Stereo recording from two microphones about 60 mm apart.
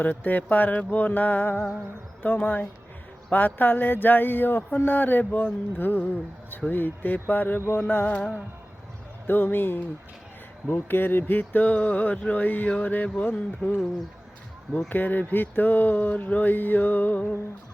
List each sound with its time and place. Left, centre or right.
0.0 s speech: left
9.2 s speech: left
14.8 s speech: left